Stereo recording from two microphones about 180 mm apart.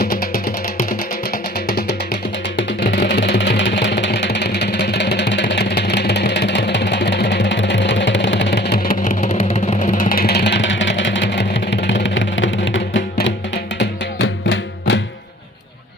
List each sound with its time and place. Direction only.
0.0 s music: 55° left (ahead or behind)
3.1 s vehicle: 70° left (ahead or behind); by 13.3 s 90° left
13.7 s music: 85° left